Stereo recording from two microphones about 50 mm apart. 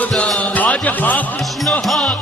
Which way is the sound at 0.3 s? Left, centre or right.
Left.